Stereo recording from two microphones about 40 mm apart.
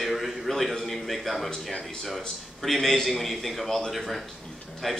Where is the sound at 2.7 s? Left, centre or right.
Centre.